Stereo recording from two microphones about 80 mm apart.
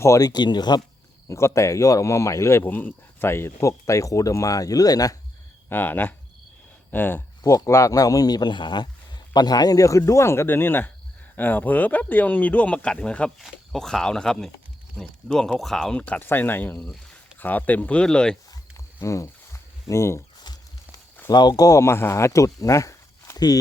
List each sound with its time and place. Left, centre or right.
0.2 s speech: left
1.3 s speech: left
5.6 s speech: left
7.4 s speech: left; by 16.0 s centre
16.0 s speech: centre
19.0 s a sound: left
21.2 s speech: left